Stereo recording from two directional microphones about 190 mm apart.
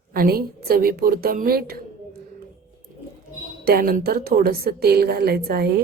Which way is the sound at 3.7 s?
50° right (ahead or behind).